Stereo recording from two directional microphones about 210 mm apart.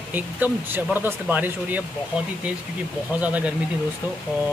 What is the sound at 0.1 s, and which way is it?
Speech, 10° right (ahead or behind).